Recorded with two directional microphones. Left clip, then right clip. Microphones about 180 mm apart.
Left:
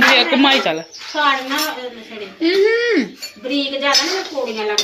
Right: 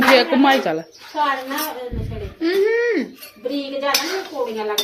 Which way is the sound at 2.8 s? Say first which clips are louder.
Left 3 dB; 35° left (ahead or behind).